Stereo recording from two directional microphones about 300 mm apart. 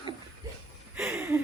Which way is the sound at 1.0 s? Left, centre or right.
Centre.